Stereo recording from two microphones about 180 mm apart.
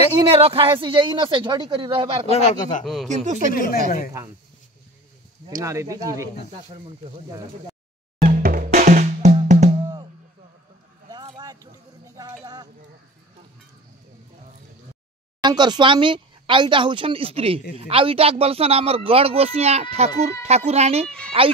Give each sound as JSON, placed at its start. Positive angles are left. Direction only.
{"t": 0.4, "sound": "speech", "side_deg": -30}
{"t": 2.2, "sound": "a man's voice", "side_deg": 35}
{"t": 2.8, "sound": "speech", "side_deg": 0}
{"t": 3.3, "sound": "speech", "side_deg": -40}
{"t": 3.5, "sound": "speech", "side_deg": 55}
{"t": 5.6, "sound": "speech", "side_deg": -15}
{"t": 8.2, "sound": "music", "side_deg": -50}
{"t": 11.1, "sound": "a sound", "side_deg": -25}
{"t": 15.4, "sound": "speech", "side_deg": -25}